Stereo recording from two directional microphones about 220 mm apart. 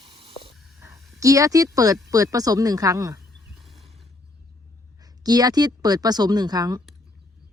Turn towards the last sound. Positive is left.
turn(degrees=-20)  # may be behind; listen again after turning